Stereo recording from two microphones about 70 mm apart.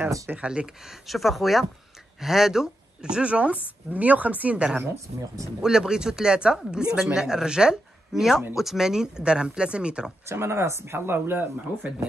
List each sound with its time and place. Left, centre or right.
0.3 s speech: centre
1.0 s speech: centre
10.2 s speech: right